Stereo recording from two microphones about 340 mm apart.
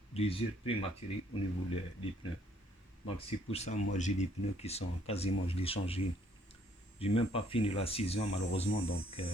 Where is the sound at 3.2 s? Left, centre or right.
Centre.